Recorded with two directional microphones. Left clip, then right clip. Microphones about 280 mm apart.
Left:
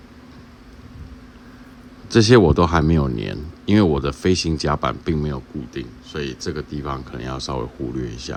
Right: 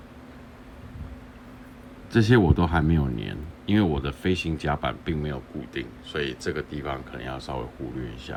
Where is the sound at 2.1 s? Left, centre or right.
Left.